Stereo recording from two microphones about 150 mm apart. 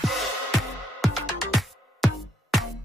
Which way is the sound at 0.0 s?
Centre (ahead or behind).